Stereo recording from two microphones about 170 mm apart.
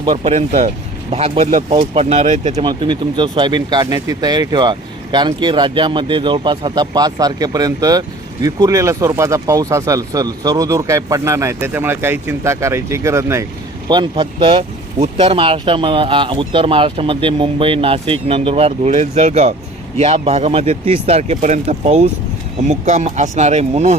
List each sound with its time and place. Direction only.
0.0 s speech: 35° right (ahead or behind)